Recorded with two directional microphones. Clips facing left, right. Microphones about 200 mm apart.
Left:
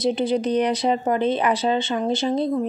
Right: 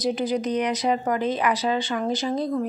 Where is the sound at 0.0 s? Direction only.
25° left (ahead or behind).